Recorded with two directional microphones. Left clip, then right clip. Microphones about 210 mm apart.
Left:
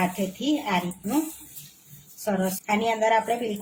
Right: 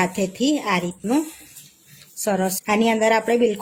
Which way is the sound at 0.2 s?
50° right (ahead or behind).